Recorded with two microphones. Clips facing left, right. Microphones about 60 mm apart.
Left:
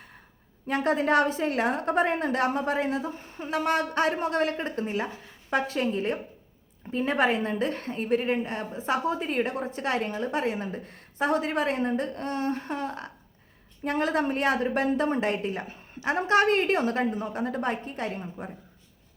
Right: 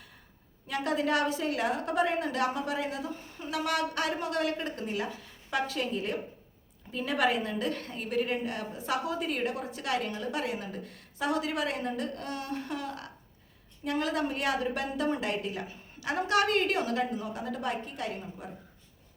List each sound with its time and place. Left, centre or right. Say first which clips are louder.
0.7 s a woman's voice: left 5 dB; left